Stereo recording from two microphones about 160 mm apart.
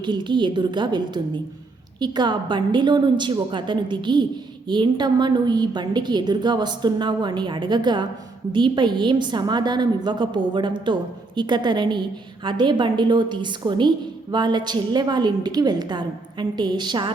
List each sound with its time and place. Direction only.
0.0 s a woman's voice: 30° right (ahead or behind)